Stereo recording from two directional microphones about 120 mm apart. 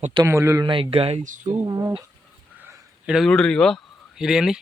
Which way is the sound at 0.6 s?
45° right (ahead or behind).